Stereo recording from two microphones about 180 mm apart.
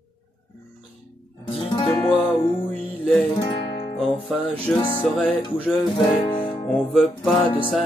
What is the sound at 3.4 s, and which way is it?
Music, 25° left (ahead or behind).